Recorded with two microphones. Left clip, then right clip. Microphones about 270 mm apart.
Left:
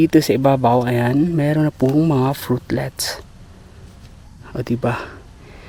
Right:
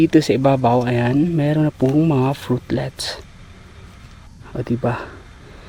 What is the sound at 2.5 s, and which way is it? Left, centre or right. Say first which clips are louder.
Speech: left 1 dB; left.